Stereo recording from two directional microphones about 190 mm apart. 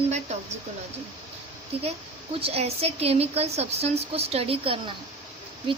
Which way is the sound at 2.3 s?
30° right (ahead or behind).